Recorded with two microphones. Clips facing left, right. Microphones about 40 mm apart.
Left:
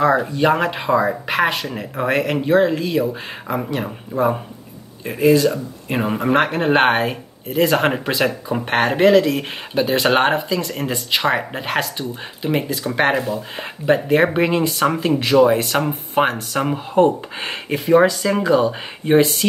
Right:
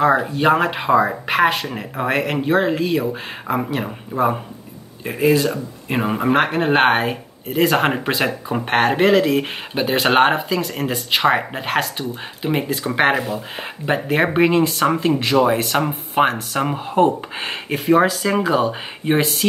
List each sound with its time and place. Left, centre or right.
0.0 s speech: centre